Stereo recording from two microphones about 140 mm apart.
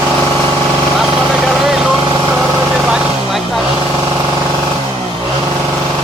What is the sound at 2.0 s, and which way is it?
Vehicle, 30° right (ahead or behind).